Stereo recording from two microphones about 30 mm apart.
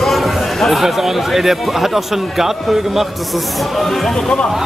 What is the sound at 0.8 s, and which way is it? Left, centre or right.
A man's voice, centre.